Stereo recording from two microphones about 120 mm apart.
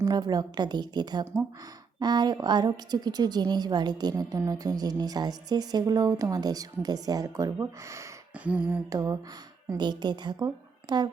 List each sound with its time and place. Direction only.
0.0 s a woman's voice: 35° right (ahead or behind)
8.4 s a sound: 10° right (ahead or behind)
8.9 s speech: 25° right (ahead or behind)
9.6 s a woman's voice: 35° right (ahead or behind)